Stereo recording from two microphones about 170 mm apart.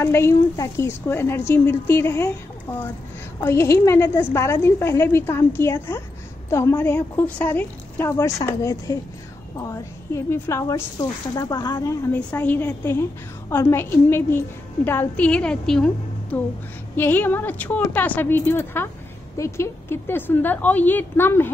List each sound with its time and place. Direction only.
0.0 s a woman's voice: 15° left (ahead or behind)
3.4 s a woman's voice: 15° left (ahead or behind)